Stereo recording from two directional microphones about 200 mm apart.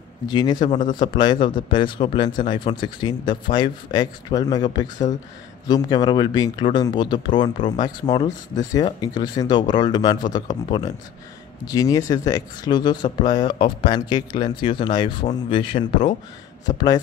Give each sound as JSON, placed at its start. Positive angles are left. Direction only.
{"t": 0.3, "sound": "speech", "side_deg": 20}
{"t": 0.6, "sound": "speech", "side_deg": 40}
{"t": 0.9, "sound": "speech", "side_deg": 20}